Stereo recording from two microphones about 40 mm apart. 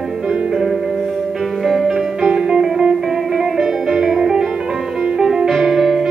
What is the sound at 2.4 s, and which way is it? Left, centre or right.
Music, centre.